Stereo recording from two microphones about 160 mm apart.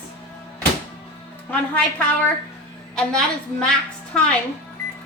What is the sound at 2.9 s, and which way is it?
Speech, 5° left (ahead or behind).